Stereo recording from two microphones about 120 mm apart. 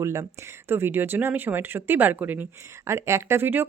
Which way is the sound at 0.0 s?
25° right (ahead or behind).